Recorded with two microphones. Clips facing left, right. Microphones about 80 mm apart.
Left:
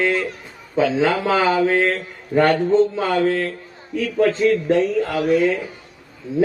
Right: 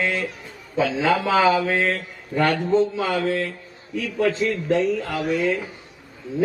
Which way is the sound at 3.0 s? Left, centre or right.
Left.